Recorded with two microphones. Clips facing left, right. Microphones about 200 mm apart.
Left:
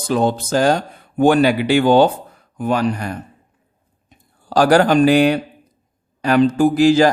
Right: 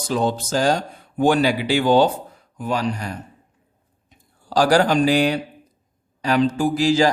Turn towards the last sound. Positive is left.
turn(degrees=55)  # may be behind; listen again after turning